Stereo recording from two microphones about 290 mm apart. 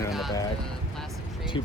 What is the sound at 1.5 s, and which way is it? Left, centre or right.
Speech, centre.